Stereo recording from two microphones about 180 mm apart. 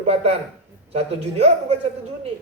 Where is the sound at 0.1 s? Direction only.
35° right (ahead or behind).